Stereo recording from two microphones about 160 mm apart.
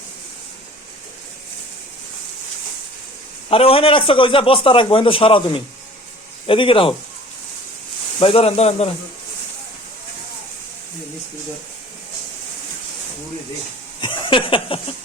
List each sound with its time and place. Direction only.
3.5 s a man's voice: 35° left (ahead or behind)
8.2 s a man's voice: 35° left (ahead or behind)
14.0 s a sound: 30° left (ahead or behind)